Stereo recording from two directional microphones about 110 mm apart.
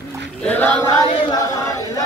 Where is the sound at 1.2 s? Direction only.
35° left (ahead or behind).